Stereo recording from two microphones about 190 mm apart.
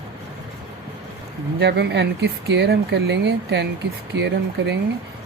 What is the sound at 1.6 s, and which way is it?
Speech, 65° right (ahead or behind).